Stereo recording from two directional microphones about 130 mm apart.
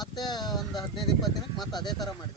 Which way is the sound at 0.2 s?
30° left (ahead or behind).